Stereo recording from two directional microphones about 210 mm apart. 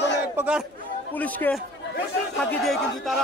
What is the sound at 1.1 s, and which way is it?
Speech, 10° left (ahead or behind).